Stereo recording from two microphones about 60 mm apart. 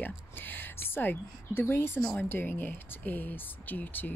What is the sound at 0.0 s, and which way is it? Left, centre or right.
A woman's voice, left.